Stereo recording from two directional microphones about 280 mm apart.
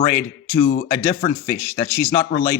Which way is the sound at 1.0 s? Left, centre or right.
Centre.